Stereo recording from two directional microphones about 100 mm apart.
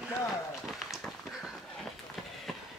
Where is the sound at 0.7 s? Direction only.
Centre (ahead or behind).